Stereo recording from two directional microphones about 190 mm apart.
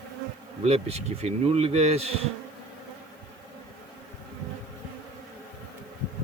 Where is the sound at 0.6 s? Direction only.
35° right (ahead or behind).